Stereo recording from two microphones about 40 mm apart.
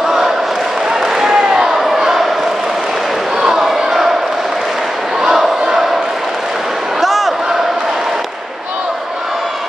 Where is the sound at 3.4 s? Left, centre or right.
Centre.